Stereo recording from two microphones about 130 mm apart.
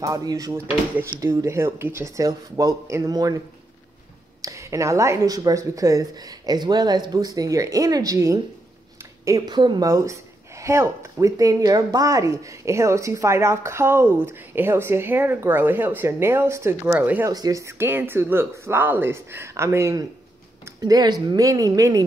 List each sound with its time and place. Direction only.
0.0 s speech: 25° right (ahead or behind)
4.4 s speech: 25° right (ahead or behind)
17.3 s speech: 30° right (ahead or behind)